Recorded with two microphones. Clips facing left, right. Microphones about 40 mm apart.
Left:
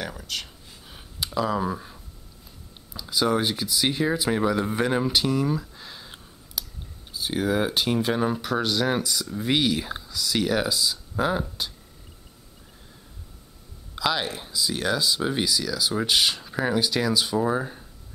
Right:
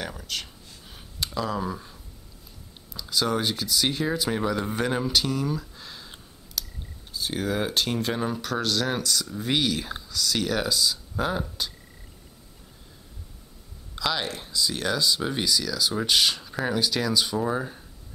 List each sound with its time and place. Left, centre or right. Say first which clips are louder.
0.0 s a sound: left 1 dB; centre
2.9 s speech: left 2 dB; centre
13.9 s speech: left 2 dB; centre